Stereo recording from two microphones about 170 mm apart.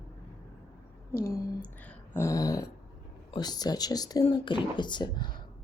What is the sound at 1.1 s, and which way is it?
Speech, 60° left (ahead or behind).